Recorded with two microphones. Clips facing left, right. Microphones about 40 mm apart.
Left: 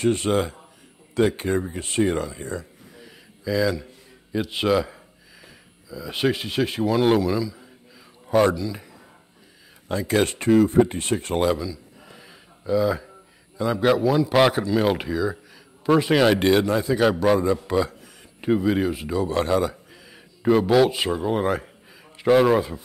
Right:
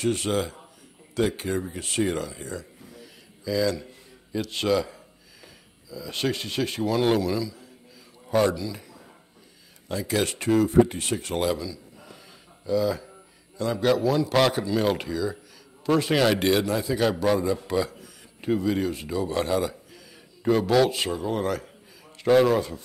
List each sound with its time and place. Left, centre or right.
0.0 s speech: centre
2.4 s speech: left
3.0 s a sound: centre
3.7 s a man's voice: centre
10.0 s speech: left
11.3 s a man's voice: centre